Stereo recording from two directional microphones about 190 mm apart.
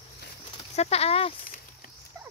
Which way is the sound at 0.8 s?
35° left (ahead or behind).